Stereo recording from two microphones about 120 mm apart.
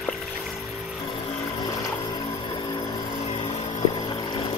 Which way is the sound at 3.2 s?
60° left (ahead or behind).